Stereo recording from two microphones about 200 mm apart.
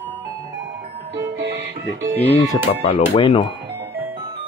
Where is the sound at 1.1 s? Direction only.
60° right (ahead or behind).